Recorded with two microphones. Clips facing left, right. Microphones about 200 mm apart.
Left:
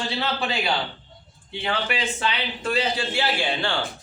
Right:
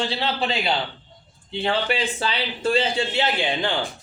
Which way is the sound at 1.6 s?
30° right (ahead or behind).